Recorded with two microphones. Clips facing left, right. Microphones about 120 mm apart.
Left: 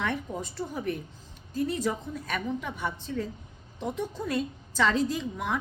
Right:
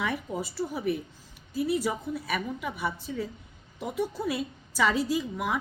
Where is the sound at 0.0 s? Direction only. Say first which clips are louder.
Even; 10° right (ahead or behind).